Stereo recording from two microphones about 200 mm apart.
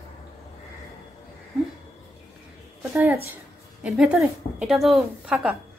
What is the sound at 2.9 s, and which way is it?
A woman's voice, 15° right (ahead or behind).